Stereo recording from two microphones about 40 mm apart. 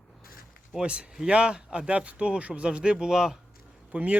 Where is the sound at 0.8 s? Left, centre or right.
Right.